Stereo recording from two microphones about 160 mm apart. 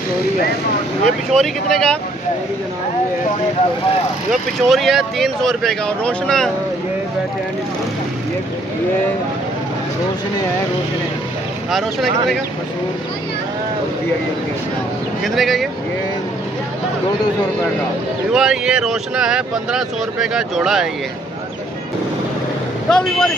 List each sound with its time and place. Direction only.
1.3 s speech: centre (ahead or behind)
4.3 s speech: centre (ahead or behind)
11.7 s speech: centre (ahead or behind)
15.2 s speech: centre (ahead or behind)
18.3 s speech: 5° right (ahead or behind)
22.8 s speech: 5° left (ahead or behind)